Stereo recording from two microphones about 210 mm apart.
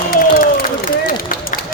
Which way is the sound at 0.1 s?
45° left (ahead or behind).